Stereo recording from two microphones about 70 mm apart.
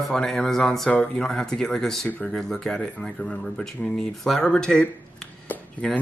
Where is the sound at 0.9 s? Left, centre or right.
Centre.